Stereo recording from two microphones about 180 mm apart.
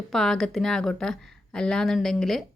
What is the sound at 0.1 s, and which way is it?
Speech, centre (ahead or behind).